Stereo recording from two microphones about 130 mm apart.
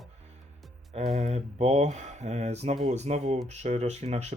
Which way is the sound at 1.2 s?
55° right (ahead or behind).